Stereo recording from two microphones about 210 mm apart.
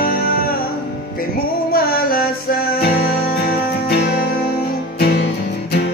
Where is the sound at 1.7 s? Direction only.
45° left (ahead or behind).